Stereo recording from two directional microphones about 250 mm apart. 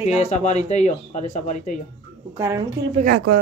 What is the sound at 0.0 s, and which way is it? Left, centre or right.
Speech, left.